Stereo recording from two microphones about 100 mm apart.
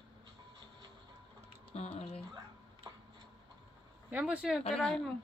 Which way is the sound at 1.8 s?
90° left.